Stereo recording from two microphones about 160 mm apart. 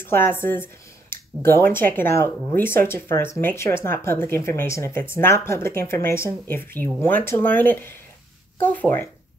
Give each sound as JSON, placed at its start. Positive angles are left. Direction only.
{"t": 0.0, "sound": "speech", "side_deg": 15}